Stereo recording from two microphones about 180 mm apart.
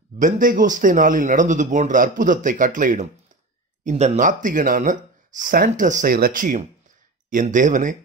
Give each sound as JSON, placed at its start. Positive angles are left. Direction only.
{"t": 0.2, "sound": "a man's voice", "side_deg": -50}
{"t": 3.8, "sound": "a man's voice", "side_deg": -35}